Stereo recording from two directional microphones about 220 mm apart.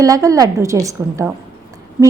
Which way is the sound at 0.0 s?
15° right (ahead or behind).